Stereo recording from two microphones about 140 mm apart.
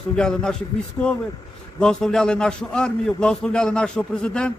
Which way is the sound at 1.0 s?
15° left (ahead or behind).